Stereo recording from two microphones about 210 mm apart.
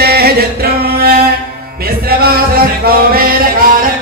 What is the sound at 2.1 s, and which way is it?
Music, 45° right (ahead or behind).